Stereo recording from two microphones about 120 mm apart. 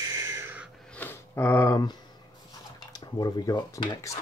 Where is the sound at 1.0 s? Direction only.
15° left (ahead or behind).